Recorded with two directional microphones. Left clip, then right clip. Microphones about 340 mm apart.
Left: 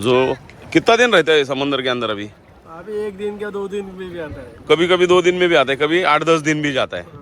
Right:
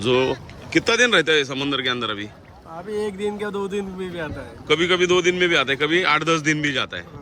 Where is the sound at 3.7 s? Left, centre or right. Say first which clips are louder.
Left 1 dB; centre.